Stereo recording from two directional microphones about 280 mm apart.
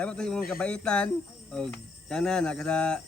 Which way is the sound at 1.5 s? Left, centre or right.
Centre.